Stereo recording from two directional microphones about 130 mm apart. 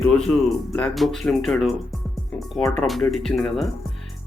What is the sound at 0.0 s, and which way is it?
Speech, 5° left (ahead or behind).